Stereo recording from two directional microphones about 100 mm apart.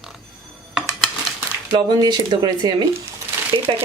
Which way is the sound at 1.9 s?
45° right (ahead or behind).